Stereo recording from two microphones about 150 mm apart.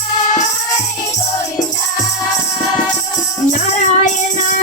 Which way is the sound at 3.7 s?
55° left (ahead or behind).